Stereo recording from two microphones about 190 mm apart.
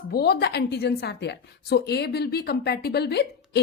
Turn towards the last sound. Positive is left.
turn(degrees=60)  # may be behind; listen again after turning